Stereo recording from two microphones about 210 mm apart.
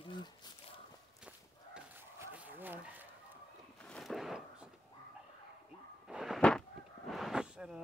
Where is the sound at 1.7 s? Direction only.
10° right (ahead or behind).